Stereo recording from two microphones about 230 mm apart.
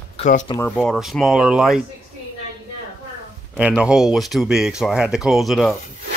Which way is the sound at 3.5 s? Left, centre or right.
Centre.